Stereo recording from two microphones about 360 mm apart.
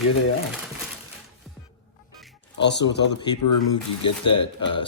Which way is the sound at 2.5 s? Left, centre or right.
Left.